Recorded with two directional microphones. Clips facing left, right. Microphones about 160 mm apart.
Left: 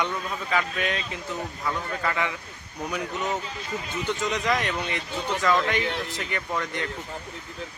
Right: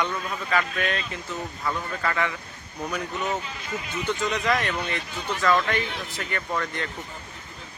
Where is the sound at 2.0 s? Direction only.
15° left (ahead or behind).